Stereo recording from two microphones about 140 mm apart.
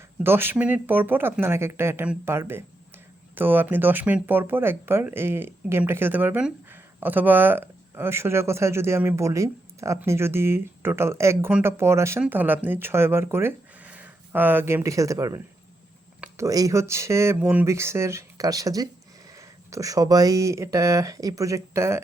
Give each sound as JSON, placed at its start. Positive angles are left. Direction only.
{"t": 0.2, "sound": "speech", "side_deg": -15}
{"t": 16.4, "sound": "speech", "side_deg": -25}